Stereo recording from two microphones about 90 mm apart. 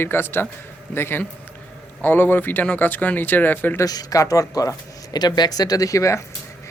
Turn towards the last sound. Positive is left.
turn(degrees=35)  # may be behind; listen again after turning